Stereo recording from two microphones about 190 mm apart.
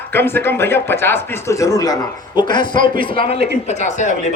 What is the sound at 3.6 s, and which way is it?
Speech, 35° left (ahead or behind).